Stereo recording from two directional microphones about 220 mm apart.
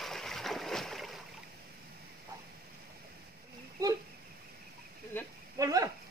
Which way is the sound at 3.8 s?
15° right (ahead or behind).